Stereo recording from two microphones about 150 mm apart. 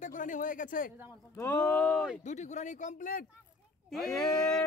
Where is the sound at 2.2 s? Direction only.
50° left (ahead or behind).